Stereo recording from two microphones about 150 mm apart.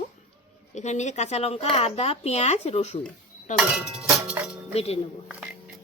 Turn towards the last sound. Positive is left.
turn(degrees=40)  # may be behind; listen again after turning